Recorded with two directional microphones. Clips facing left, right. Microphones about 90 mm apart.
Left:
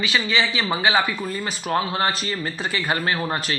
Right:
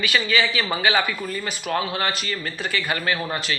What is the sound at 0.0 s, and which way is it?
Speech, 25° left (ahead or behind).